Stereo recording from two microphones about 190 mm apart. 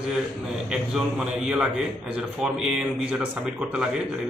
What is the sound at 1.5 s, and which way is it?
A man's voice, 5° right (ahead or behind).